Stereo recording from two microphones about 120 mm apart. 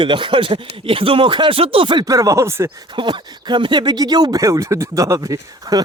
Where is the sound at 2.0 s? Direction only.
30° right (ahead or behind).